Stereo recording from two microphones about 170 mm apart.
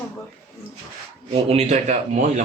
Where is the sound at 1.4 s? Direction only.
40° right (ahead or behind).